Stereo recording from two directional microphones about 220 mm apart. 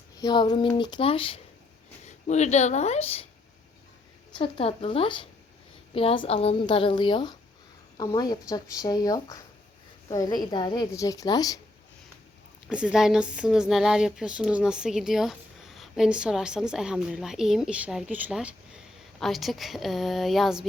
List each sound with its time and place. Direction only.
0.2 s a woman's voice: 20° left (ahead or behind)
4.4 s a woman's voice: 25° left (ahead or behind)
12.6 s speech: 5° right (ahead or behind)